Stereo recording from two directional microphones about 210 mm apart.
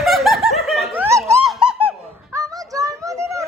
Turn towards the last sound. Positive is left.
turn(degrees=-15)  # may be behind; listen again after turning